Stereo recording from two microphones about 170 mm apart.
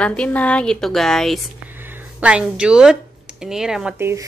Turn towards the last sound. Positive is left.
turn(degrees=-15)  # may be behind; listen again after turning